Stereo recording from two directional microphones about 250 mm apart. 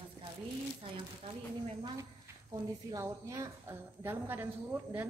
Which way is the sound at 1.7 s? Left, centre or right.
Centre.